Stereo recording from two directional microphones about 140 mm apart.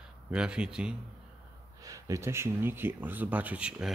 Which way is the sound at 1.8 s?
25° right (ahead or behind).